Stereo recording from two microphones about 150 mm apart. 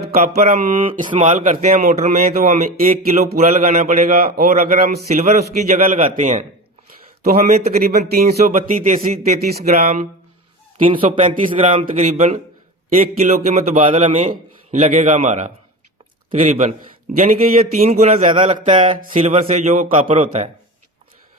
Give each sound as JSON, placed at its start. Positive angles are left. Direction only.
{"t": 0.4, "sound": "a man's voice", "side_deg": -65}
{"t": 3.6, "sound": "speech", "side_deg": -60}
{"t": 5.0, "sound": "a man's voice", "side_deg": -55}
{"t": 7.3, "sound": "speech", "side_deg": -80}
{"t": 8.5, "sound": "speech", "side_deg": -55}
{"t": 10.8, "sound": "a man's voice", "side_deg": -35}
{"t": 11.6, "sound": "a man's voice", "side_deg": -55}
{"t": 18.7, "sound": "a man's voice", "side_deg": -35}
{"t": 18.9, "sound": "a man's voice", "side_deg": -50}